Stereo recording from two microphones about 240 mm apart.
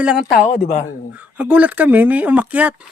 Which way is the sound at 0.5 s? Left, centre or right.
Left.